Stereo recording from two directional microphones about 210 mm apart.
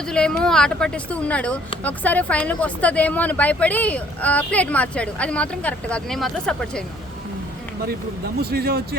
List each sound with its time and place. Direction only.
0.1 s speech: 5° left (ahead or behind)
8.4 s speech: 45° right (ahead or behind)